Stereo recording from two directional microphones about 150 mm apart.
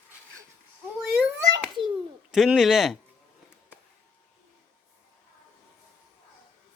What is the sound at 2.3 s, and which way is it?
Speech, 5° right (ahead or behind).